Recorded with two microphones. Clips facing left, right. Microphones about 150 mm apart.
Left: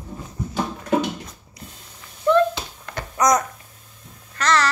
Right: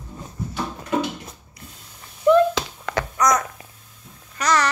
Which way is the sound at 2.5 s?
90° right.